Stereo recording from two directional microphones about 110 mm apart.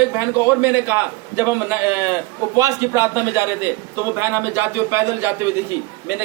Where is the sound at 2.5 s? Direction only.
30° right (ahead or behind).